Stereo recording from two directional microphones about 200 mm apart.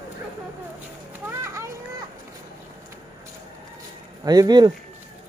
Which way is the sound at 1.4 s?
15° right (ahead or behind).